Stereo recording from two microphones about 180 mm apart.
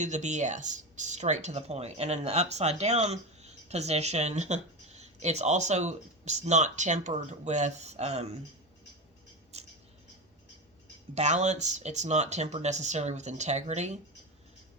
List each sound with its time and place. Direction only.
0.0 s speech: 40° right (ahead or behind)
9.5 s scissors: 35° right (ahead or behind)
11.1 s speech: 40° right (ahead or behind)